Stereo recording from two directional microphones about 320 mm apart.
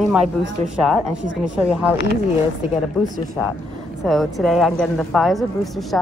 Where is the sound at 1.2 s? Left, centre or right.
Right.